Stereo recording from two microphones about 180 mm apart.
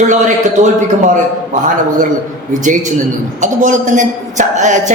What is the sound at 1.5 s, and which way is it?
A man's voice, 45° right (ahead or behind).